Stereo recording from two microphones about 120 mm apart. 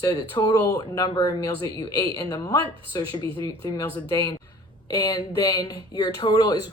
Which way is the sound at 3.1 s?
45° right (ahead or behind).